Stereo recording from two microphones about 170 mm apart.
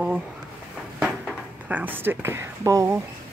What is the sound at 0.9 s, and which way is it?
Speech, 5° right (ahead or behind).